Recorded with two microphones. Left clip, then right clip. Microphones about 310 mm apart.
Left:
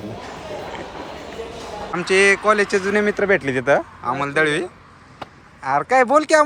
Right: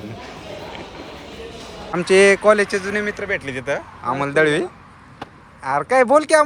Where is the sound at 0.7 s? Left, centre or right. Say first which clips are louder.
Left 3 dB; centre.